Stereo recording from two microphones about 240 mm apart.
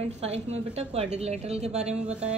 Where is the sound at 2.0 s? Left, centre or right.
Centre.